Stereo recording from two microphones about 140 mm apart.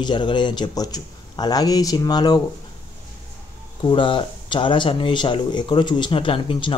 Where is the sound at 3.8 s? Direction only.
35° left (ahead or behind).